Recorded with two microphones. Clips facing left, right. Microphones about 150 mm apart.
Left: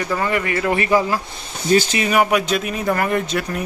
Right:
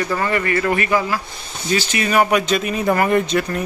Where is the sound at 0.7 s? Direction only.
25° left (ahead or behind).